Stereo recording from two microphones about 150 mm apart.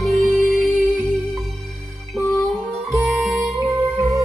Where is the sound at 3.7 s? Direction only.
20° right (ahead or behind).